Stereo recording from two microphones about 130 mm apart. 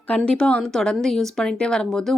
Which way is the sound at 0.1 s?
10° left (ahead or behind).